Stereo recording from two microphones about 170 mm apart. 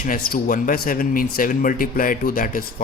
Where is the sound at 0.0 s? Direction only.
55° left (ahead or behind).